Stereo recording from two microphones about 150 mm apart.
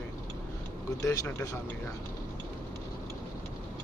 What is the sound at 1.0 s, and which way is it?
Speech, 20° left (ahead or behind).